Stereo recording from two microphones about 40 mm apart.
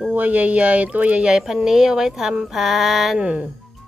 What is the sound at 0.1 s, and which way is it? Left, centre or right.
Speech, right.